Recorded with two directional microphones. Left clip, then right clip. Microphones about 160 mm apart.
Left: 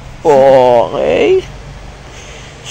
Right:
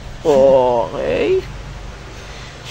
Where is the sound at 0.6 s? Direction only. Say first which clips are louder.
Left 7 dB; 15° left (ahead or behind).